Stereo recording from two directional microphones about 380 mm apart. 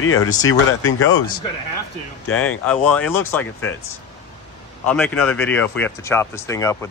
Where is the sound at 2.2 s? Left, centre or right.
Left.